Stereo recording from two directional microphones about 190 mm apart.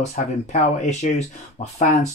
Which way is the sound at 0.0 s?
35° left (ahead or behind).